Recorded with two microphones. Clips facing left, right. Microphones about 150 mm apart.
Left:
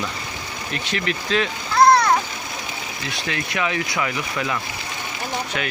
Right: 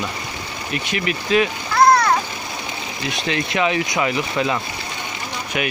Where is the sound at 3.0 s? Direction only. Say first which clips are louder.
Right 5 dB; 20° right (ahead or behind).